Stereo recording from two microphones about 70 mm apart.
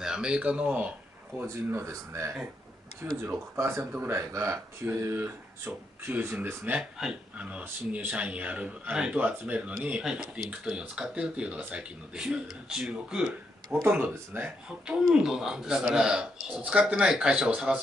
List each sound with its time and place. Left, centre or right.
0.0 s speech: centre
1.4 s speech: right
3.0 s speech: right
4.3 s speech: right
4.8 s speech: right
7.0 s speech: centre
13.8 s speech: right
14.9 s speech: centre